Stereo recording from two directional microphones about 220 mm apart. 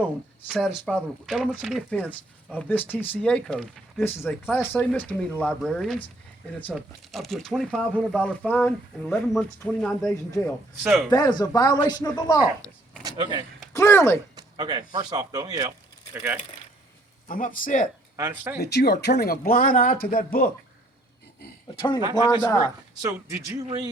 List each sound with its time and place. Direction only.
0.4 s speech: 5° right (ahead or behind)
11.1 s speech: 20° left (ahead or behind)
13.0 s a sound: 20° right (ahead or behind)
13.7 s speech: 10° left (ahead or behind)
14.3 s speech: 20° right (ahead or behind)
17.2 s speech: 40° left (ahead or behind)
18.2 s speech: 10° right (ahead or behind)
18.6 s speech: 45° left (ahead or behind)
21.8 s speech: 20° left (ahead or behind)
23.0 s speech: 15° right (ahead or behind)